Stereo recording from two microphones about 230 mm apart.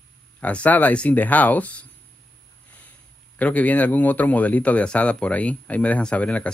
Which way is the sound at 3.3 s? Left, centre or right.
Centre.